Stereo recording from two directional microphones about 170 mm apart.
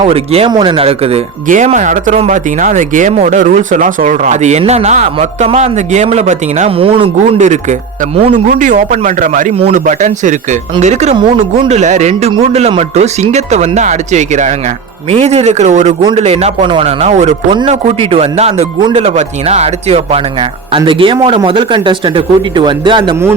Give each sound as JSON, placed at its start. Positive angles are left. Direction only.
{"t": 0.0, "sound": "speech", "side_deg": -35}
{"t": 1.5, "sound": "speech", "side_deg": -45}
{"t": 7.3, "sound": "speech", "side_deg": -45}
{"t": 9.6, "sound": "speech", "side_deg": -35}
{"t": 9.8, "sound": "a man's voice", "side_deg": -45}